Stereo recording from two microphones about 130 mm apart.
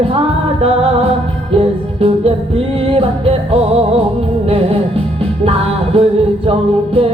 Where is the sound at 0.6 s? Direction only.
50° right (ahead or behind).